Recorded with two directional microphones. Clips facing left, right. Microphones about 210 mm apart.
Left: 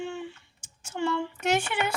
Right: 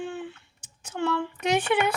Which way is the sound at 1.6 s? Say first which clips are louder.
Right 6 dB; 60° right (ahead or behind).